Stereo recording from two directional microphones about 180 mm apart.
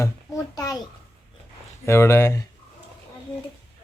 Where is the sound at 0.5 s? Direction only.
20° left (ahead or behind).